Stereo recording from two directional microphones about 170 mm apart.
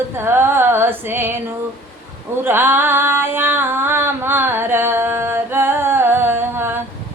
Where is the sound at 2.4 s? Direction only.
15° right (ahead or behind).